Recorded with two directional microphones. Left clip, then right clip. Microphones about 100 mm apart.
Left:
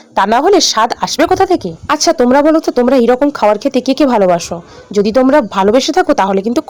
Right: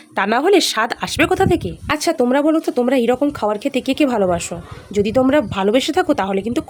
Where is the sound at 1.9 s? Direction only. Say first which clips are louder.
Left 7 dB; 55° left (ahead or behind).